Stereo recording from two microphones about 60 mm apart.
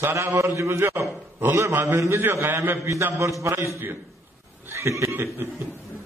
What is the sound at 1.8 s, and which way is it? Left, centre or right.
Speech, right.